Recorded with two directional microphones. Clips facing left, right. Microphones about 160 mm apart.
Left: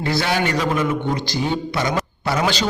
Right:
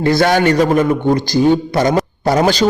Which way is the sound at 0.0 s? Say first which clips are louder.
Right 8 dB; 50° right (ahead or behind).